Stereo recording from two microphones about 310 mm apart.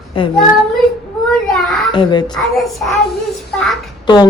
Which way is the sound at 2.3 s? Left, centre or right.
Centre.